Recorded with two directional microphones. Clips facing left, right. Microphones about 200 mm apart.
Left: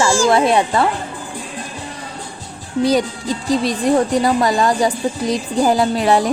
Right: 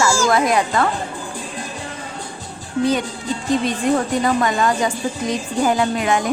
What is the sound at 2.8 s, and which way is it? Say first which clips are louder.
Speech: left 4 dB; 35° left (ahead or behind).